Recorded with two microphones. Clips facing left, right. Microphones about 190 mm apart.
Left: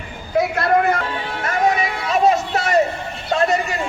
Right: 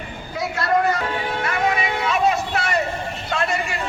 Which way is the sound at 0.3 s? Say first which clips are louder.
Left 4 dB; 55° left (ahead or behind).